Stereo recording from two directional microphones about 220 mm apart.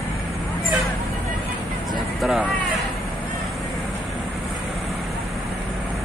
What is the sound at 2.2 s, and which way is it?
Speech, centre (ahead or behind).